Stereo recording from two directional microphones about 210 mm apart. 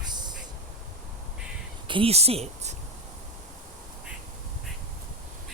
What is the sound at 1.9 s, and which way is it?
Speech, 30° right (ahead or behind).